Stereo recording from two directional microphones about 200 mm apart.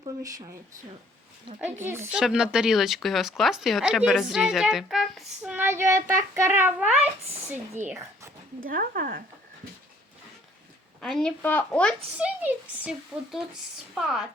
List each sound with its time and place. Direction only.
0.0 s a child's voice: 20° right (ahead or behind)
1.6 s a child's voice: 10° right (ahead or behind)
8.6 s speech: 45° right (ahead or behind)
11.0 s speech: centre (ahead or behind)
12.1 s speech: 5° right (ahead or behind)